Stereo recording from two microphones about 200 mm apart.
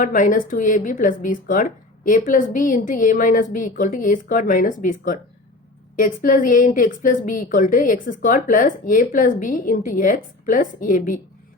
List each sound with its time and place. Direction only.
0.0 s a woman's voice: 40° left (ahead or behind)